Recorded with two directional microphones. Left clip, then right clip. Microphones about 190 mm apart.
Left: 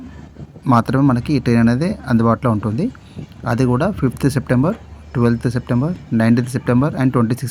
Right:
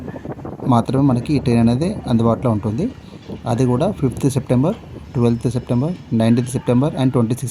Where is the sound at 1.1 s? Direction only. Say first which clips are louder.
Left 1 dB; 50° left (ahead or behind).